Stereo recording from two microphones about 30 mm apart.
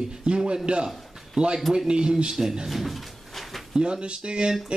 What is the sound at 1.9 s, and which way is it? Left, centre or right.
Speech, right.